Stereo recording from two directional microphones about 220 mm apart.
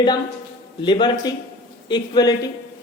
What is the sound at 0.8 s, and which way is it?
A man's voice, 20° left (ahead or behind).